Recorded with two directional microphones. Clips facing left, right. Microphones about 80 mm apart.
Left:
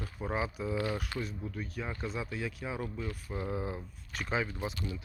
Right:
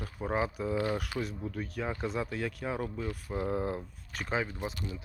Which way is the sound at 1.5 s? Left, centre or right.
Right.